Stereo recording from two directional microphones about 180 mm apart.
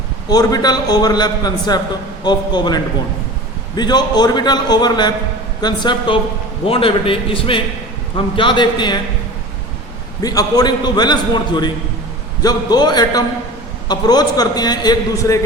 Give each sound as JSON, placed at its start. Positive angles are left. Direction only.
{"t": 0.3, "sound": "a man's voice", "side_deg": 20}
{"t": 10.2, "sound": "a man's voice", "side_deg": 20}